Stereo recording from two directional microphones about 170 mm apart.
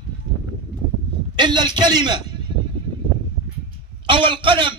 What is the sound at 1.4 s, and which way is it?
A man's voice, 25° right (ahead or behind).